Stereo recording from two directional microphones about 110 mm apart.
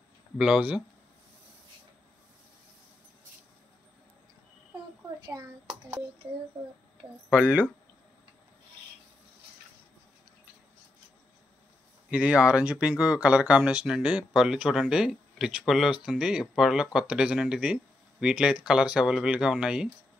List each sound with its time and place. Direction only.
0.4 s speech: 10° right (ahead or behind)
5.2 s speech: 30° right (ahead or behind)
7.2 s speech: 10° right (ahead or behind)
12.1 s speech: 10° right (ahead or behind)